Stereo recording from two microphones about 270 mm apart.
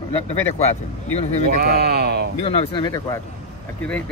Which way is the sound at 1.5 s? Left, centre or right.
Right.